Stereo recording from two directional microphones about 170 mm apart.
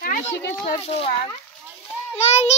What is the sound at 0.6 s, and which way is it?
Speech, 35° left (ahead or behind).